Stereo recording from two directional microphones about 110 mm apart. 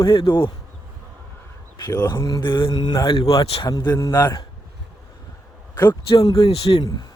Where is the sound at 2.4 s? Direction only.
50° left (ahead or behind).